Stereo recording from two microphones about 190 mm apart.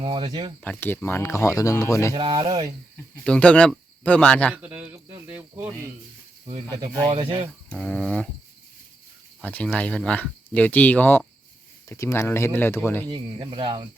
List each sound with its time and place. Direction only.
0.0 s speech: 25° right (ahead or behind)
0.6 s speech: 10° left (ahead or behind)
2.1 s speech: 25° right (ahead or behind)
3.2 s speech: 5° left (ahead or behind)
4.5 s speech: 10° right (ahead or behind)
7.1 s speech: 25° right (ahead or behind)
7.7 s speech: 5° left (ahead or behind)
9.4 s speech: 5° left (ahead or behind)
13.1 s speech: 25° right (ahead or behind)